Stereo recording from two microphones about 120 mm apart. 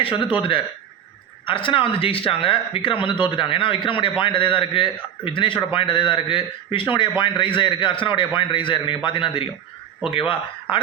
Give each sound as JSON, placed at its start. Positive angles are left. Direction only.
{"t": 0.0, "sound": "speech", "side_deg": 45}
{"t": 1.5, "sound": "speech", "side_deg": 45}